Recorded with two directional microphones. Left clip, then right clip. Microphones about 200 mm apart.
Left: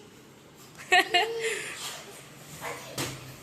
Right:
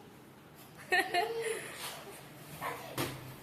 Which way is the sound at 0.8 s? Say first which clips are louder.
Left 8 dB; 5° left (ahead or behind).